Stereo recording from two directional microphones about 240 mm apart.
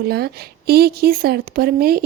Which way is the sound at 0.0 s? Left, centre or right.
Right.